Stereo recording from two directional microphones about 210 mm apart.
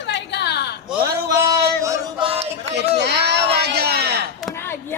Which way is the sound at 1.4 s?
15° right (ahead or behind).